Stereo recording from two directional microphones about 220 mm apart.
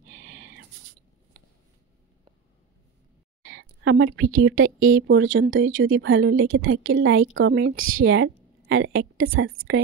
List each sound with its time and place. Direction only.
0.1 s a sound: 65° right (ahead or behind)
3.4 s a woman's voice: 60° right (ahead or behind)
9.7 s a woman's voice: 50° right (ahead or behind)